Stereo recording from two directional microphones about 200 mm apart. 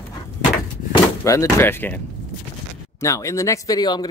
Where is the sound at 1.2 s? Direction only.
15° left (ahead or behind).